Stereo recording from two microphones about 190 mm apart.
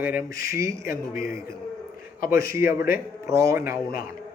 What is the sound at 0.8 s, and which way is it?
Speech, 50° left (ahead or behind).